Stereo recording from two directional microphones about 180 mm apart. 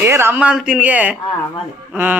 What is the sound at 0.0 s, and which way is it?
Speech, 15° right (ahead or behind).